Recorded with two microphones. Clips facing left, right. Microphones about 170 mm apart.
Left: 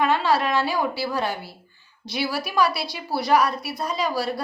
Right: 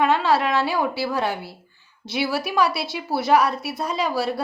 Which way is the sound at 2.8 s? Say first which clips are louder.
Right 2 dB; 20° right (ahead or behind).